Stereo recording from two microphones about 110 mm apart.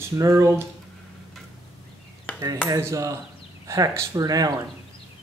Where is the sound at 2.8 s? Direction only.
25° right (ahead or behind).